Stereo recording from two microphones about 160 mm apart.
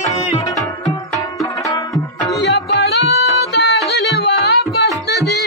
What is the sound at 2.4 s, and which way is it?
Music, 90° left.